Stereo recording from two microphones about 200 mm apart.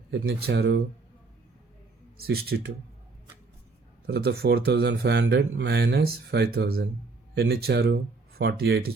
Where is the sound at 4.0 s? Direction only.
50° right (ahead or behind).